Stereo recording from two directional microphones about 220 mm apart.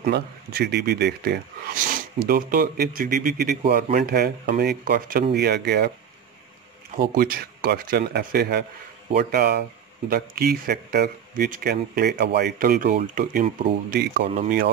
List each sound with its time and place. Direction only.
0.0 s speech: 45° right (ahead or behind)
7.0 s speech: 40° right (ahead or behind)
14.2 s speech: 30° right (ahead or behind)